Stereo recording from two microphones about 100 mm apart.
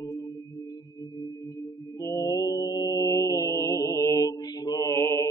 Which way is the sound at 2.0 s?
30° left (ahead or behind).